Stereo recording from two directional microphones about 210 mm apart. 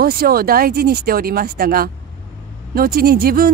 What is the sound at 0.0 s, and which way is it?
Speech, 45° right (ahead or behind).